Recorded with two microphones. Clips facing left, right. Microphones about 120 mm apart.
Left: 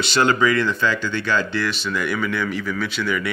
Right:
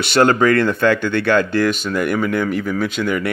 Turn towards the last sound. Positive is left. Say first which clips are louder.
# right 4 dB
turn(degrees=-50)  # may be behind; listen again after turning